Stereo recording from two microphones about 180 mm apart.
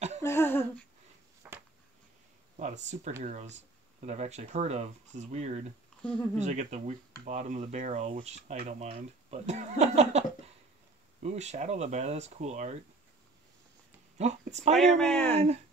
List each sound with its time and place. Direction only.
0.2 s humming: 15° left (ahead or behind)
1.4 s a sound: 10° right (ahead or behind)
2.5 s speech: 40° right (ahead or behind)
11.2 s speech: 40° right (ahead or behind)
14.1 s speech: 40° right (ahead or behind)
14.8 s speech: 5° left (ahead or behind)
15.3 s speech: 35° right (ahead or behind)